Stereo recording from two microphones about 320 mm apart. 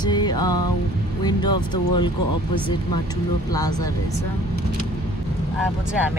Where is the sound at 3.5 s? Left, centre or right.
Centre.